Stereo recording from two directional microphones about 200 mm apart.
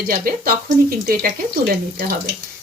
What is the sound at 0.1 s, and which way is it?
Speech, 45° right (ahead or behind).